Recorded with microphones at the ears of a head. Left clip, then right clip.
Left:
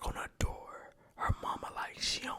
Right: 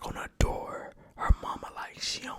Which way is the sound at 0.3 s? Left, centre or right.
Right.